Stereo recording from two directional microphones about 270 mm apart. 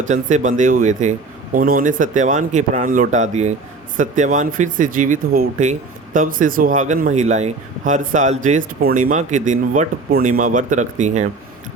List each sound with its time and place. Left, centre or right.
0.0 s speech: right